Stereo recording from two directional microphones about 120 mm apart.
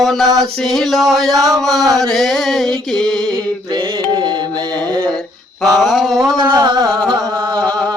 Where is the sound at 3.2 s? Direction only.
35° right (ahead or behind).